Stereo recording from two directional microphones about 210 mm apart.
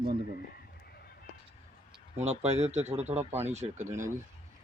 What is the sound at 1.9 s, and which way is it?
Speech, 30° right (ahead or behind).